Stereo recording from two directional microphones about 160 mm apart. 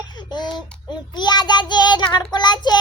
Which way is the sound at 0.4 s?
5° left (ahead or behind).